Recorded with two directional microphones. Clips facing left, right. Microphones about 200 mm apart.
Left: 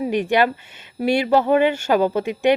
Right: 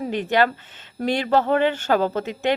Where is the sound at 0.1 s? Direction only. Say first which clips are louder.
Left 1 dB; 15° left (ahead or behind).